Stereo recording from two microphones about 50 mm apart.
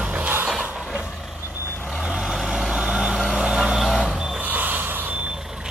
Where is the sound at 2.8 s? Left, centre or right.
Centre.